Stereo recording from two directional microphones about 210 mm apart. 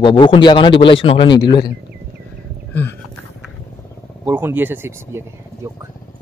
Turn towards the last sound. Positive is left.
turn(degrees=-10)  # may be behind; listen again after turning